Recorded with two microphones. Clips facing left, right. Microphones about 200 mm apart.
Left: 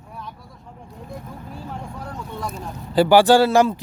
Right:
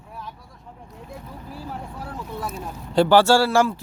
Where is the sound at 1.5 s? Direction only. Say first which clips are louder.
Even; 5° right (ahead or behind).